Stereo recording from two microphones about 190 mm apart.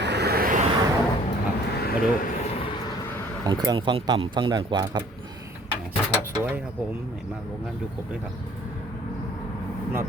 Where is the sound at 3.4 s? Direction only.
20° right (ahead or behind).